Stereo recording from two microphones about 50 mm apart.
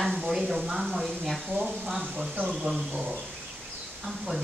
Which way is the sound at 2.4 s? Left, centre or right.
Centre.